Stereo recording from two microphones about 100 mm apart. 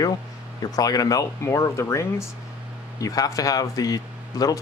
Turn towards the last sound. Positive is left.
turn(degrees=40)  # may be behind; listen again after turning